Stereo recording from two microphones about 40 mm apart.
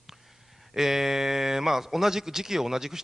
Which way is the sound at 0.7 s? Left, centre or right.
Centre.